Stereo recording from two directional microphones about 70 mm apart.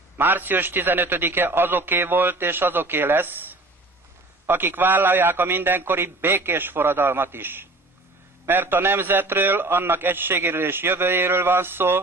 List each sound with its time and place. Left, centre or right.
0.2 s a man's voice: right